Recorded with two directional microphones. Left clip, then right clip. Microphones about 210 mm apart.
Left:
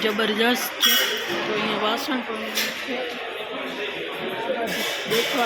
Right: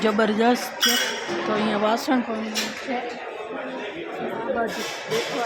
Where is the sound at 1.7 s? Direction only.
50° right (ahead or behind).